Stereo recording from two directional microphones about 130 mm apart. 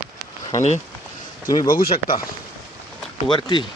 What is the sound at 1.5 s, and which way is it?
Speech, 30° left (ahead or behind).